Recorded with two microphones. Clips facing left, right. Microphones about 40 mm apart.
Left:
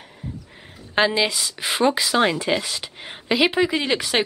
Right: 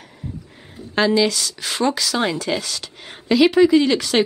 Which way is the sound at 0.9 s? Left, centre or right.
Left.